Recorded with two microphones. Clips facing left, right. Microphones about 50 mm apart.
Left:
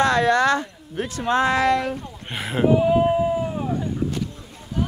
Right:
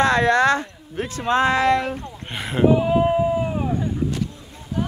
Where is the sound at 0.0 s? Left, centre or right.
Right.